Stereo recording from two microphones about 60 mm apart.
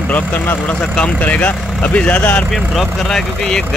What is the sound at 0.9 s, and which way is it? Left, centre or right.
Speech, left.